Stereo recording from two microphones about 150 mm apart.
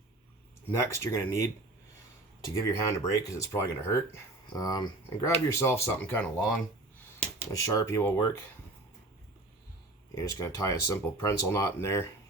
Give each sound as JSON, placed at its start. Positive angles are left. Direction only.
{"t": 0.8, "sound": "speech", "side_deg": 20}
{"t": 7.3, "sound": "speech", "side_deg": 20}
{"t": 10.2, "sound": "speech", "side_deg": 20}